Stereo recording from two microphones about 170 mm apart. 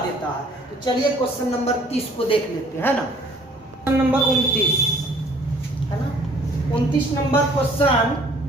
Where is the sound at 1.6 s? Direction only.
35° left (ahead or behind).